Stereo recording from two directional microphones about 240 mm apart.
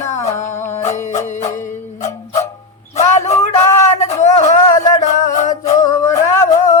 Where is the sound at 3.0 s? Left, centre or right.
Left.